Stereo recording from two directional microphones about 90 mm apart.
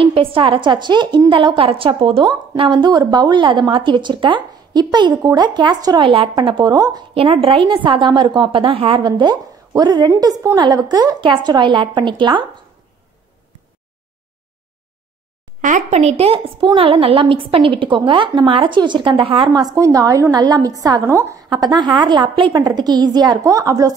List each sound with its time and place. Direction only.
0.0 s a woman's voice: 90° right; by 1.2 s 60° right (ahead or behind)
1.3 s a woman's voice: 75° right (ahead or behind); by 6.0 s 50° right (ahead or behind)
6.0 s a woman's voice: 75° right (ahead or behind); by 7.1 s 45° right (ahead or behind)
7.4 s a woman's voice: 70° right (ahead or behind)
9.0 s a woman's voice: 55° right (ahead or behind)
16.2 s a woman's voice: 90° right; by 19.5 s 70° right (ahead or behind)
19.5 s a woman's voice: 50° right (ahead or behind)
19.8 s a woman's voice: 40° right (ahead or behind)
21.5 s a woman's voice: 55° right (ahead or behind)